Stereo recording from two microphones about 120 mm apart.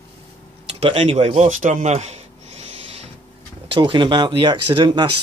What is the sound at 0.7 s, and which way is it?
Speech, 50° right (ahead or behind).